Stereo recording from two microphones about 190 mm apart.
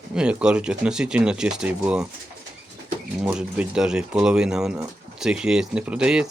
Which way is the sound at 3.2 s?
5° right (ahead or behind).